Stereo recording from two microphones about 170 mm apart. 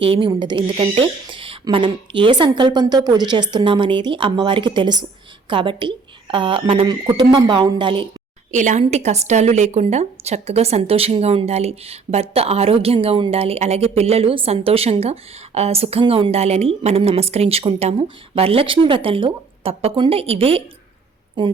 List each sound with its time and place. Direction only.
0.0 s speech: 30° right (ahead or behind)
8.5 s a woman's voice: 45° right (ahead or behind); by 21.5 s 30° right (ahead or behind)